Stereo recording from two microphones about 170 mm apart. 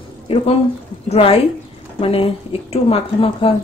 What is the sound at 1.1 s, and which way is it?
Speech, 35° left (ahead or behind).